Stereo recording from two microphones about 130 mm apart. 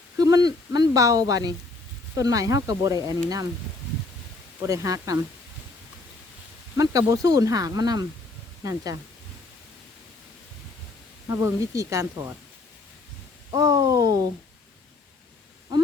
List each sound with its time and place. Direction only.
0.2 s speech: 30° right (ahead or behind)
4.6 s speech: 25° right (ahead or behind)
6.7 s speech: 25° right (ahead or behind)
11.3 s speech: 25° right (ahead or behind)
13.5 s speech: 30° right (ahead or behind)
15.7 s speech: 30° right (ahead or behind)